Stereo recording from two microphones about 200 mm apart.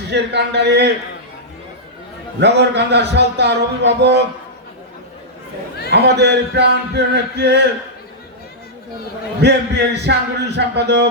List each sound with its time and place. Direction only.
0.1 s a man's voice: 55° right (ahead or behind)
2.4 s a man's voice: 60° right (ahead or behind)
5.9 s a man's voice: 55° right (ahead or behind)
9.4 s a man's voice: 55° right (ahead or behind)